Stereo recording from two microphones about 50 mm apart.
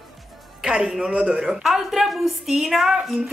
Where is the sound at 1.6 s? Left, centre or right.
Centre.